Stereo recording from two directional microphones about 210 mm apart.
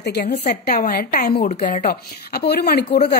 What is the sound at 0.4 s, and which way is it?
A woman's voice, 40° left (ahead or behind).